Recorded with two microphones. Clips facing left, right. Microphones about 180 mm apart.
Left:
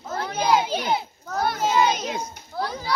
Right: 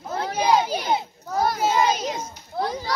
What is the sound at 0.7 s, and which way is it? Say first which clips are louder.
Children playing: even; 15° right (ahead or behind).